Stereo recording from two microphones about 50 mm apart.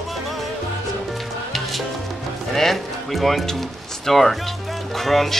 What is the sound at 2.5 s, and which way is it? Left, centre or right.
Speech, centre.